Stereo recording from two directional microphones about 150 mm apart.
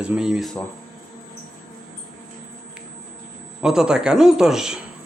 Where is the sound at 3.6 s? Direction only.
5° right (ahead or behind).